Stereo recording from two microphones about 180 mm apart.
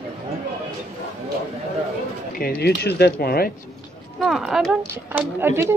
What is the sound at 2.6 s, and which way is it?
Speech, 65° left (ahead or behind).